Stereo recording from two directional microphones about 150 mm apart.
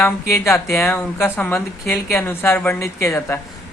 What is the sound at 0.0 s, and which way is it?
A woman's voice, 20° left (ahead or behind).